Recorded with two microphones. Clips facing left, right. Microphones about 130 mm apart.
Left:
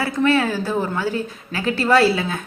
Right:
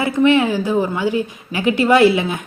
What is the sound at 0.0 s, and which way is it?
A woman's voice, 15° right (ahead or behind).